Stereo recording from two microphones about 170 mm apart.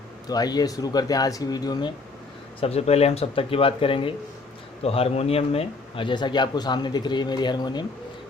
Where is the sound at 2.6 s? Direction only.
35° left (ahead or behind).